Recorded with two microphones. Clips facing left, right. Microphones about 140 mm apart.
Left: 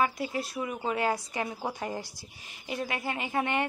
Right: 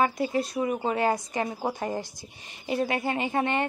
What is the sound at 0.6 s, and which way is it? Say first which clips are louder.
Speech: right 4 dB; 35° right (ahead or behind).